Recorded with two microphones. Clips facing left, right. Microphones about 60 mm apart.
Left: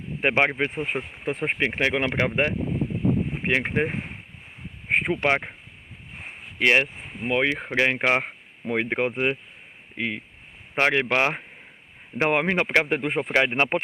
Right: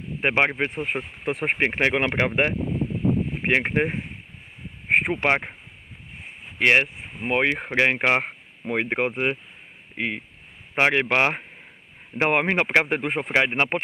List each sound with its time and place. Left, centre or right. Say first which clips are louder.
0.2 s speech: even; centre
1.7 s speech: right 2 dB; centre
5.1 s speech: right 1 dB; centre
6.6 s speech: right 1 dB; right
7.6 s speech: right 1 dB; centre